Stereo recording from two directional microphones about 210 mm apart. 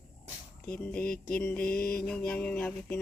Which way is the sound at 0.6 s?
5° left (ahead or behind).